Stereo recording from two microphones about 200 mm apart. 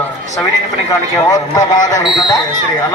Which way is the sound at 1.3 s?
20° left (ahead or behind).